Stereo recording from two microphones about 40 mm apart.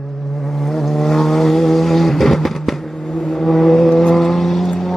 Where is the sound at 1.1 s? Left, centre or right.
Centre.